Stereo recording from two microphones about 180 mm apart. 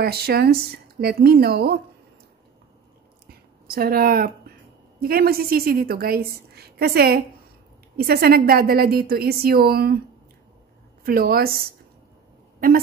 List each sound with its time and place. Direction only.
0.0 s speech: 60° right (ahead or behind)
3.6 s a woman's voice: 55° right (ahead or behind)
11.1 s speech: 55° right (ahead or behind)
12.5 s a sound: 55° right (ahead or behind)